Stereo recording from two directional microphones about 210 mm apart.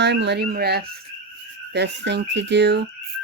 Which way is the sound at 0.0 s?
55° right (ahead or behind).